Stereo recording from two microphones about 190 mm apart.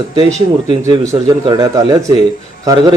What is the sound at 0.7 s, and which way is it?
Speech, 20° right (ahead or behind).